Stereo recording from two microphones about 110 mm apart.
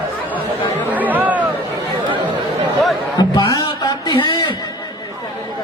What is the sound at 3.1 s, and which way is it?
Music, 40° left (ahead or behind).